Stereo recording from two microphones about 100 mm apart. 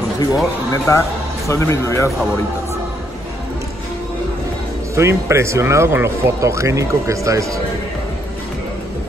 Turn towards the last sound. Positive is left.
turn(degrees=-30)  # may be behind; listen again after turning